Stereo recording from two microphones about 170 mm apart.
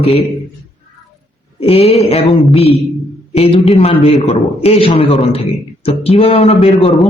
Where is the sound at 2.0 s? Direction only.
35° left (ahead or behind).